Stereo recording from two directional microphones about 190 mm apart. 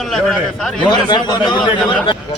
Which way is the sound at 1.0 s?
20° left (ahead or behind).